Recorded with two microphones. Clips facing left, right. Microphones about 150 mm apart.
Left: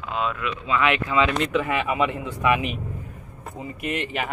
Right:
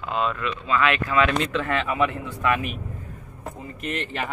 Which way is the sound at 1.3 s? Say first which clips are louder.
Left 1 dB; 5° left (ahead or behind).